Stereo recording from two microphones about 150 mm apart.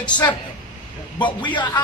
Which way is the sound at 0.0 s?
30° left (ahead or behind).